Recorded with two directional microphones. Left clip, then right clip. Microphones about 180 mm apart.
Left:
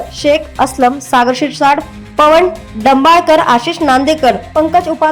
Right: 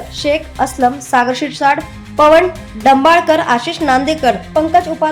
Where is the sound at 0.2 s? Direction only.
15° left (ahead or behind).